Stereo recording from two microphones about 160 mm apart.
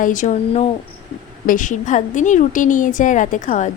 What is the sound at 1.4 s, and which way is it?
Speech, 55° left (ahead or behind).